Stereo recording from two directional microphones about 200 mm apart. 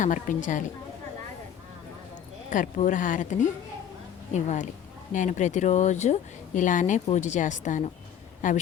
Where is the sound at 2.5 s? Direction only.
40° left (ahead or behind).